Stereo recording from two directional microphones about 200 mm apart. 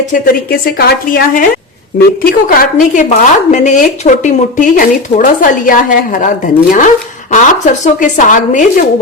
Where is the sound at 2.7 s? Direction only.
40° left (ahead or behind).